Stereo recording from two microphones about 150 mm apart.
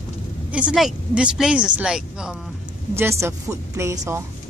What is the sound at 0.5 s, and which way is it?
Speech, 5° right (ahead or behind).